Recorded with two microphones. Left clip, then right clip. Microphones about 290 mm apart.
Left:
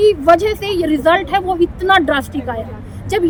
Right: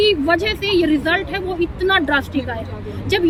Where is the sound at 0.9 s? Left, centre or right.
Centre.